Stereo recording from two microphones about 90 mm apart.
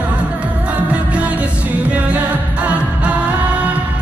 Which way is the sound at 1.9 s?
15° right (ahead or behind).